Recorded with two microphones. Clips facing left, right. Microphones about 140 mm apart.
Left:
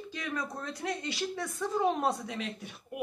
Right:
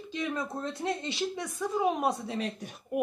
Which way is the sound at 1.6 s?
5° right (ahead or behind).